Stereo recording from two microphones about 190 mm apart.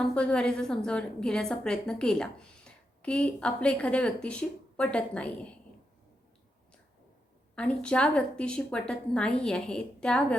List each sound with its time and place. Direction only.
0.0 s a woman's voice: 5° left (ahead or behind)
7.5 s a woman's voice: 5° left (ahead or behind)